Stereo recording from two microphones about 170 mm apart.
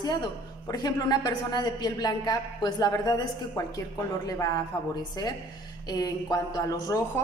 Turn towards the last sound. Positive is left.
turn(degrees=20)  # may be behind; listen again after turning